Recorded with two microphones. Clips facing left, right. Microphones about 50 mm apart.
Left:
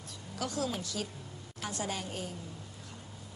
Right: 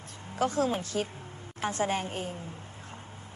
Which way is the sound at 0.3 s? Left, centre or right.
Right.